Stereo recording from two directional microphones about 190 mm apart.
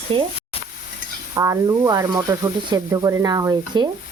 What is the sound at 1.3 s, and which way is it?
Speech, 20° right (ahead or behind).